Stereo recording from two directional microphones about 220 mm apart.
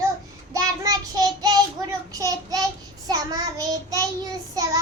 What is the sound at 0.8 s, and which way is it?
Child singing, 15° right (ahead or behind).